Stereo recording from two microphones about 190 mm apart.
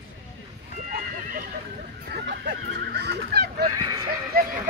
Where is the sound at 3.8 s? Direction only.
20° right (ahead or behind).